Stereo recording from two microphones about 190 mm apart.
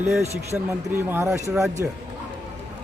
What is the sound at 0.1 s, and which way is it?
Speech, 15° right (ahead or behind).